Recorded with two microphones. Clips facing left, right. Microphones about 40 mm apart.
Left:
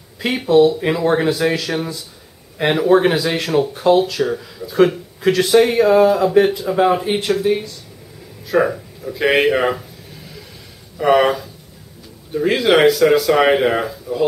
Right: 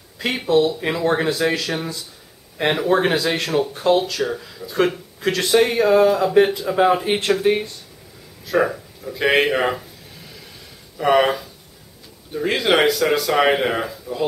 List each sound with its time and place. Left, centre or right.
0.2 s speech: centre
7.4 s speech: right
8.5 s speech: centre
11.0 s speech: centre